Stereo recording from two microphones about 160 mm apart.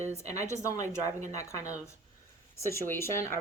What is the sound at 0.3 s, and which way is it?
Speech, 20° left (ahead or behind).